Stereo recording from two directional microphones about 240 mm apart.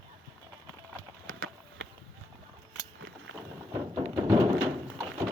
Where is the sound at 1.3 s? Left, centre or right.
Right.